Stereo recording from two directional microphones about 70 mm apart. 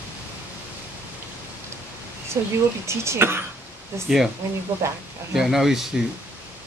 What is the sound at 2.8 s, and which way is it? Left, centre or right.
Speech, right.